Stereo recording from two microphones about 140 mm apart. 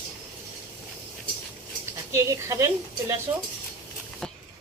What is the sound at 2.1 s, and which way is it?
Speech, 20° right (ahead or behind).